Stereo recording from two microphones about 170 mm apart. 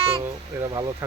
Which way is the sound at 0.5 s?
10° right (ahead or behind).